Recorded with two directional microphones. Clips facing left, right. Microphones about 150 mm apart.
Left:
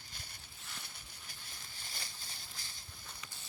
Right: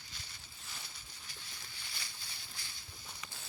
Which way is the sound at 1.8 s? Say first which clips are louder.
Left 2 dB; 45° left (ahead or behind).